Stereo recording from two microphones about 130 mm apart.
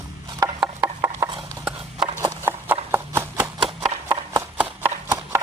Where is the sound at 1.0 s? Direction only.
20° right (ahead or behind).